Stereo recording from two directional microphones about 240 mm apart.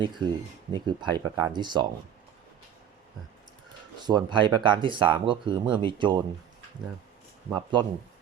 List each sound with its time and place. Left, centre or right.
0.7 s speech: centre
4.0 s speech: centre
7.5 s speech: centre